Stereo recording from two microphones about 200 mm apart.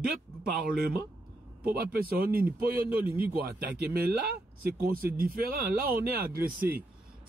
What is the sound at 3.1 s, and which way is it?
Speech, 10° right (ahead or behind).